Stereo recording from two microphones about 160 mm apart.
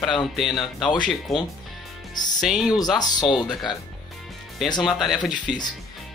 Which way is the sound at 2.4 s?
5° right (ahead or behind).